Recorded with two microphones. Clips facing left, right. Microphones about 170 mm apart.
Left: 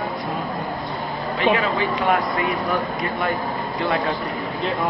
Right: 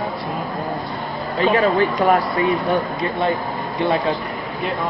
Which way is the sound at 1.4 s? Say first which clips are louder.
Right 4 dB; 40° right (ahead or behind).